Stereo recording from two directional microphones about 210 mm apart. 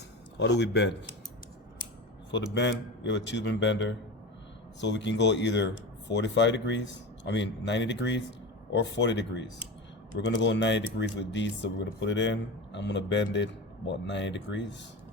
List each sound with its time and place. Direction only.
0.3 s speech: 55° left (ahead or behind)
2.3 s speech: 55° left (ahead or behind)